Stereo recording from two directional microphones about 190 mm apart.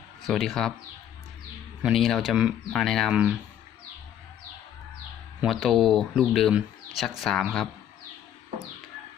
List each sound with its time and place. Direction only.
0.3 s speech: centre (ahead or behind)
1.8 s speech: centre (ahead or behind)
5.4 s speech: centre (ahead or behind)